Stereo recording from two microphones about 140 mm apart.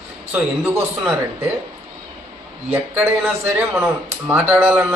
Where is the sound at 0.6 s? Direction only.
15° right (ahead or behind).